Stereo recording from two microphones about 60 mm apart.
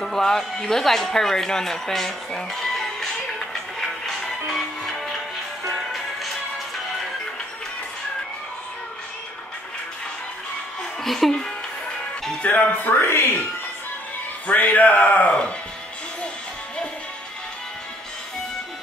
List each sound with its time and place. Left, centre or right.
0.0 s a sound: centre
5.7 s music: centre
11.1 s speech: centre
12.4 s speech: left
14.5 s speech: left